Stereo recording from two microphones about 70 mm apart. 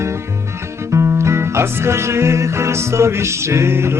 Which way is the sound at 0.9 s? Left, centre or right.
Right.